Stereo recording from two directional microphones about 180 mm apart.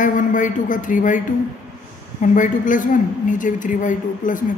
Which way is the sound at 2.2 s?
45° left (ahead or behind).